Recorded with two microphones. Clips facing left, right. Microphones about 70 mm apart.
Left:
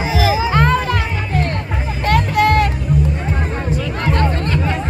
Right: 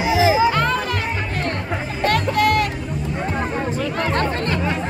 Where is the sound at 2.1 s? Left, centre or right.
Left.